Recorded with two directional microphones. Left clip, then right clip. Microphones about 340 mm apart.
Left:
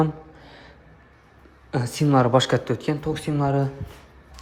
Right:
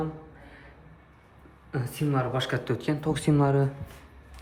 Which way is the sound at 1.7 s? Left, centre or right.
Centre.